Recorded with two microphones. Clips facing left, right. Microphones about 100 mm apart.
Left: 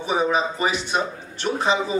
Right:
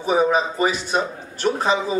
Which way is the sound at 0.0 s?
40° right (ahead or behind).